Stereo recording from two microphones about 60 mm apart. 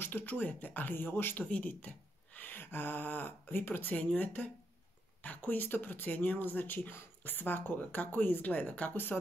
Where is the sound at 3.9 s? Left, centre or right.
Left.